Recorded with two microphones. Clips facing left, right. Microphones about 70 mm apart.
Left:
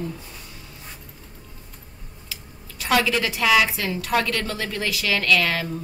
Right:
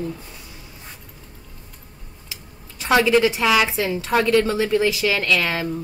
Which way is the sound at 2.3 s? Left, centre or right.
Right.